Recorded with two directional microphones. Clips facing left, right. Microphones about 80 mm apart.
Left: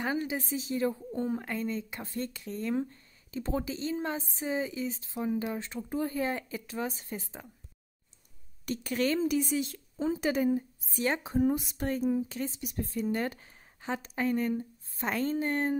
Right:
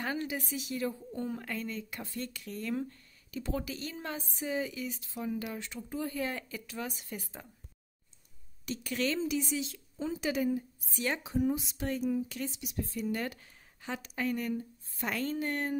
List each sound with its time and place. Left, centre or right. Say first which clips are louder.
0.0 s a woman's voice: left 3 dB; centre
8.6 s speech: left 3 dB; left